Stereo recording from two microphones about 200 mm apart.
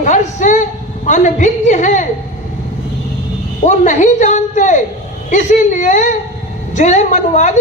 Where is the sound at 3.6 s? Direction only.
35° left (ahead or behind).